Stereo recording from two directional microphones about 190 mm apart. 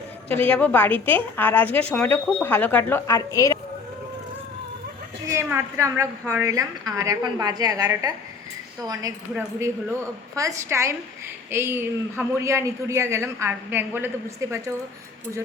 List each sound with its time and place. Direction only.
0.4 s a woman's voice: 10° left (ahead or behind)
5.2 s a woman's voice: 15° right (ahead or behind)